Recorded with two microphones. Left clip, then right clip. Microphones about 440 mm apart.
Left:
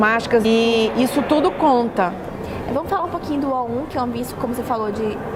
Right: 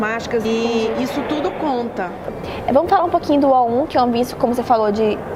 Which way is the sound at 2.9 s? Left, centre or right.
Right.